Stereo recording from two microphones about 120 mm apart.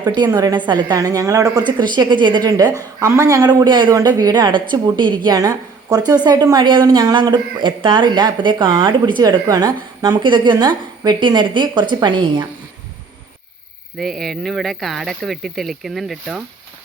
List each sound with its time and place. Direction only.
0.0 s a woman's voice: 35° right (ahead or behind)
14.0 s speech: 5° left (ahead or behind)